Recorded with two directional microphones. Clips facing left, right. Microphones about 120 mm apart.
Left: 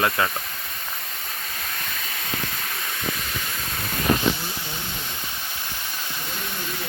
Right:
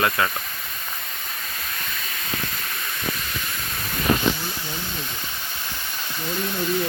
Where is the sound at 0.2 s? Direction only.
25° left (ahead or behind).